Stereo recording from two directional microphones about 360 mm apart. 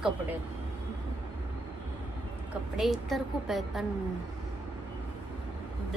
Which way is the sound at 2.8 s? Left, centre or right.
Centre.